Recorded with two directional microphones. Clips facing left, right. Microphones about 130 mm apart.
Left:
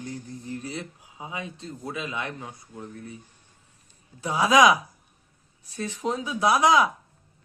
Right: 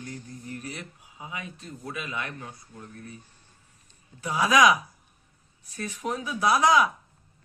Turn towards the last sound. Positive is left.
turn(degrees=20)  # may be behind; listen again after turning